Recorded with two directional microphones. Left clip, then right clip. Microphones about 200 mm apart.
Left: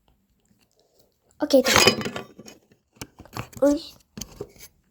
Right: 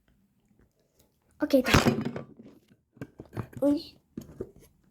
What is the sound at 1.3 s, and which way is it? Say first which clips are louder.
Speech: left 6 dB; centre (ahead or behind).